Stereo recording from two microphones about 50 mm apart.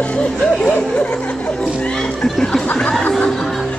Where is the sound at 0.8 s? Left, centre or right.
Left.